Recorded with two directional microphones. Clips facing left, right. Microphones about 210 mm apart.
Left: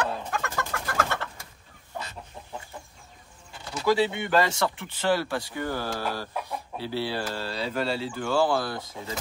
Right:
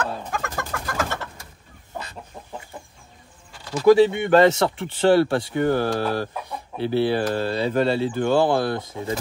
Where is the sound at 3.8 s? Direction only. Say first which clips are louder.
Right 9 dB; 50° right (ahead or behind).